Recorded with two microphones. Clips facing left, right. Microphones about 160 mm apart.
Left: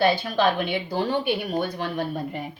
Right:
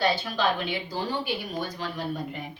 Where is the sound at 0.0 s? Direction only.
55° left (ahead or behind).